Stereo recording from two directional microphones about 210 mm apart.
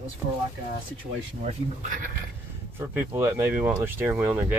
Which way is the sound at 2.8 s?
10° right (ahead or behind).